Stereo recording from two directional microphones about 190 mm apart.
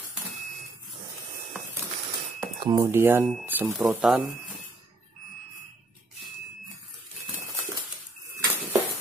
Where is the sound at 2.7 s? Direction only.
15° right (ahead or behind).